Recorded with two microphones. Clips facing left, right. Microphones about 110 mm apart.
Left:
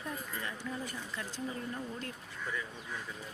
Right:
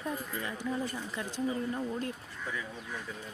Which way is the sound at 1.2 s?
20° right (ahead or behind).